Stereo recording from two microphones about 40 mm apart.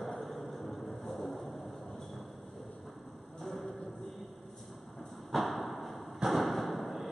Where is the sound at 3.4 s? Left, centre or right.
Centre.